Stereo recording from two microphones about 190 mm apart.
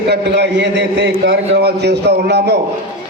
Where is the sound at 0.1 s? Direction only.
65° right (ahead or behind).